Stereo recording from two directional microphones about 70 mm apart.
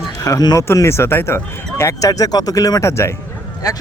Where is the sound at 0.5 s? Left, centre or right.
Left.